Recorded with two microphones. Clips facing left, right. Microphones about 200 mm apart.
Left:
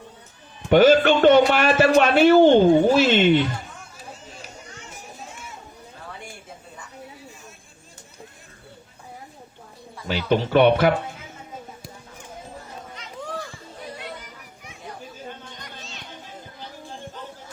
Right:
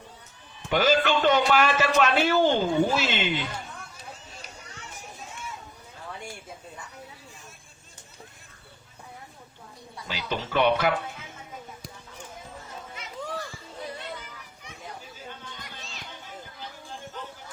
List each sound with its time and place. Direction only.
0.7 s a man's voice: 50° left (ahead or behind)
10.1 s a man's voice: 55° left (ahead or behind)
15.8 s children playing: centre (ahead or behind)